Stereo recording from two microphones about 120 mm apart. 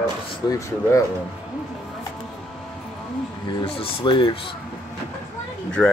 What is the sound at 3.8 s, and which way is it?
Speech, 45° left (ahead or behind).